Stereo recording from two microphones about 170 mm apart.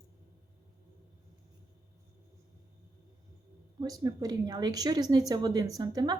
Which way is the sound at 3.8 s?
20° right (ahead or behind).